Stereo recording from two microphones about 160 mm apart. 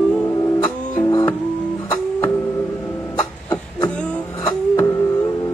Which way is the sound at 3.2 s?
20° left (ahead or behind).